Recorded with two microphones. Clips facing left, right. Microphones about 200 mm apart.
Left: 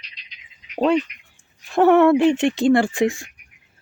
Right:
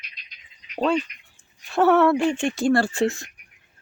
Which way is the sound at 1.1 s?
40° right (ahead or behind).